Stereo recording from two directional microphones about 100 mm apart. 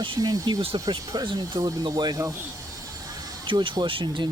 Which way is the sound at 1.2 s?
50° right (ahead or behind).